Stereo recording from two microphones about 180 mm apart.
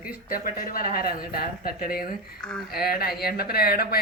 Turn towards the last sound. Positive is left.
turn(degrees=60)  # may be behind; listen again after turning